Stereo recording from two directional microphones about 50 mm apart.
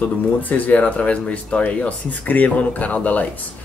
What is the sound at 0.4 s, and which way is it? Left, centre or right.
Speech, left.